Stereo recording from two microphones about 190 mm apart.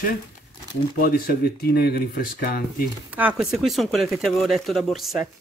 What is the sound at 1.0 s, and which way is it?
Speech, 50° left (ahead or behind).